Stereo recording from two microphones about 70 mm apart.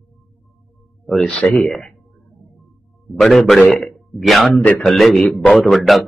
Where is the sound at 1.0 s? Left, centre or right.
Centre.